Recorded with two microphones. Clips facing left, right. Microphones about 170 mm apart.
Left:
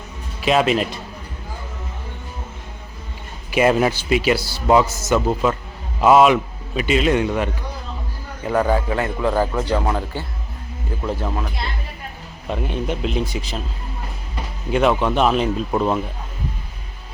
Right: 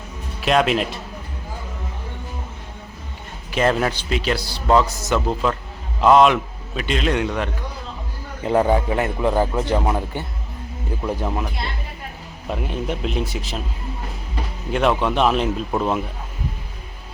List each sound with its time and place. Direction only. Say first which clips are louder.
0.4 s a man's voice: left 1 dB; centre (ahead or behind)
3.5 s a man's voice: left 3 dB; 10° left (ahead or behind)
8.4 s speech: right 1 dB; 25° right (ahead or behind)
12.5 s a man's voice: left 1 dB; centre (ahead or behind)
14.7 s a man's voice: left 2 dB; centre (ahead or behind)